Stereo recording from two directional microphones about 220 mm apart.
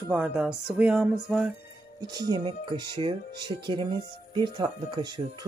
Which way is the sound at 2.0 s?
20° right (ahead or behind).